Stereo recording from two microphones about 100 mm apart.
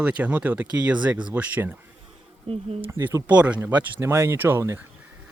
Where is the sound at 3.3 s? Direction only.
15° right (ahead or behind).